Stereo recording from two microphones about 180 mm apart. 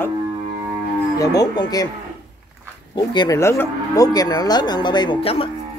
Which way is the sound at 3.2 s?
15° left (ahead or behind).